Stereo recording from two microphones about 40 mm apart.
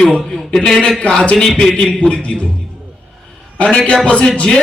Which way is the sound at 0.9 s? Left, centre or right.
Left.